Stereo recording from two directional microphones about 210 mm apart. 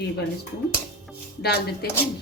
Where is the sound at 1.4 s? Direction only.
50° left (ahead or behind).